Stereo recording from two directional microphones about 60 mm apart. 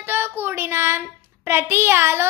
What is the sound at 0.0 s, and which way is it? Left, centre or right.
Child singing, right.